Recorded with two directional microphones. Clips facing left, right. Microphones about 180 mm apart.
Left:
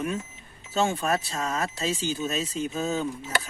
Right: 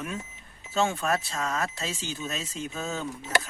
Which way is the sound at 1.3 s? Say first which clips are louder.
Left 1 dB; 20° left (ahead or behind).